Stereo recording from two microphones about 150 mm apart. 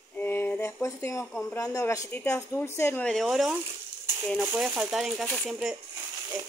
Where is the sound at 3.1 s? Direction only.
Centre (ahead or behind).